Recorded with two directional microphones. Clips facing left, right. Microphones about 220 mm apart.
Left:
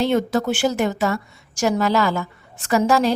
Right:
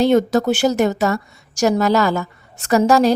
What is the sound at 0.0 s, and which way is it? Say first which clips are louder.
A woman's voice: right 5 dB; 40° right (ahead or behind).